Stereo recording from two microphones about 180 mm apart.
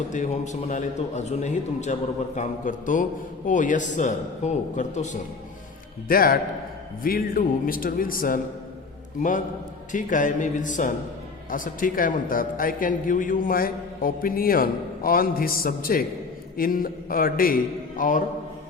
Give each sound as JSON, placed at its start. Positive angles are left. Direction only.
{"t": 0.1, "sound": "a man's voice", "side_deg": 40}
{"t": 6.1, "sound": "a man's voice", "side_deg": 55}
{"t": 9.9, "sound": "a man's voice", "side_deg": 45}